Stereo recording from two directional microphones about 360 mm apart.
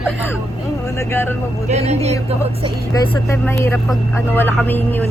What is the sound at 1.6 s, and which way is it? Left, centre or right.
Speech, centre.